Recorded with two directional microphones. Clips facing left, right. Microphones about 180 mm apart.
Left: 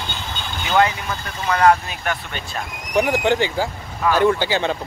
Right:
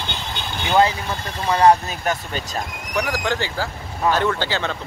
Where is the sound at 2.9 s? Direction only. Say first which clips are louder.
Left 6 dB; 20° left (ahead or behind).